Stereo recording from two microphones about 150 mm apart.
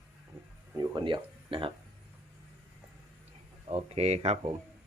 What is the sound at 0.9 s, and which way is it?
Speech, 35° right (ahead or behind).